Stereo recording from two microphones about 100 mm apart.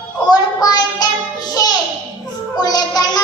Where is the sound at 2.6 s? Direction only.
40° left (ahead or behind).